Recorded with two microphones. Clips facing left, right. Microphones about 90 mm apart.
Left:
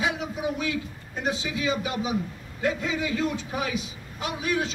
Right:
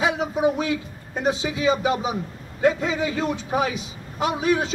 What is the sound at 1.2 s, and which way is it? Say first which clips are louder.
A man's voice: right 6 dB; 25° right (ahead or behind).